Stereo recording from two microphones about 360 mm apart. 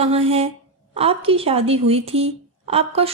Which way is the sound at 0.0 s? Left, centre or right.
Centre.